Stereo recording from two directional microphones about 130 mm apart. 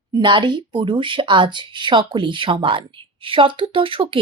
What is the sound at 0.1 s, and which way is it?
Speech, 35° right (ahead or behind).